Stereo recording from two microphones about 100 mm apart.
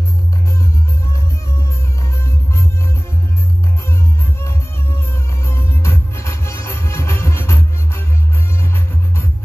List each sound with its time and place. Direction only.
2.2 s music: 25° left (ahead or behind)
4.4 s music: 25° left (ahead or behind)